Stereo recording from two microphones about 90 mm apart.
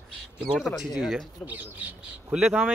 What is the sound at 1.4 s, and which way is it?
Speech, 20° right (ahead or behind).